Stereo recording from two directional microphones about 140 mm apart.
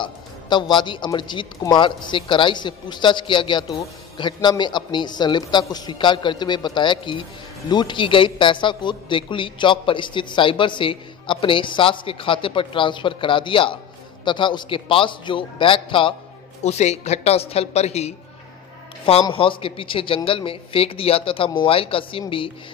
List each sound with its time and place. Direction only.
0.0 s a man's voice: 30° left (ahead or behind)
16.6 s a woman's voice: 50° left (ahead or behind)
19.3 s a man's voice: 40° left (ahead or behind)